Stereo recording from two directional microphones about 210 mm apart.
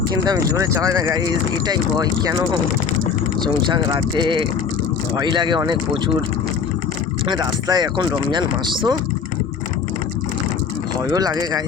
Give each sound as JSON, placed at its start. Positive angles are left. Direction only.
{"t": 0.3, "sound": "speech", "side_deg": -15}
{"t": 3.4, "sound": "speech", "side_deg": -20}
{"t": 7.3, "sound": "speech", "side_deg": -20}
{"t": 11.1, "sound": "speech", "side_deg": -20}